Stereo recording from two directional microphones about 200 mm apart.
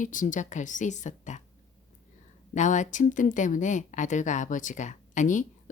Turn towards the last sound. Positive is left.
turn(degrees=40)  # may be behind; listen again after turning